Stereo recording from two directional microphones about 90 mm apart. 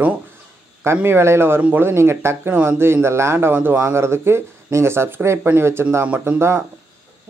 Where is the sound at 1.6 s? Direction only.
15° right (ahead or behind).